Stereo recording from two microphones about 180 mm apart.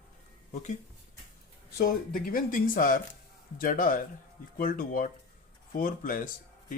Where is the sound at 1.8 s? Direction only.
50° left (ahead or behind).